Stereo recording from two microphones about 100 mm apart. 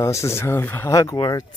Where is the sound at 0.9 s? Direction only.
35° left (ahead or behind).